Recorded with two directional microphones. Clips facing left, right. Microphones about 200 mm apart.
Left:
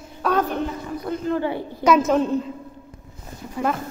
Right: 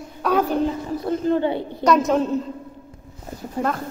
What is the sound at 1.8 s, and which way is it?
Speech, centre (ahead or behind).